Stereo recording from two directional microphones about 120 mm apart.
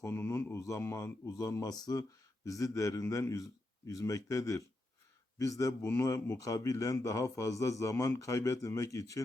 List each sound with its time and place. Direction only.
0.0 s speech: 20° left (ahead or behind)